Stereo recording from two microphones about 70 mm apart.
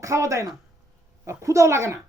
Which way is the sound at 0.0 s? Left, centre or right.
Right.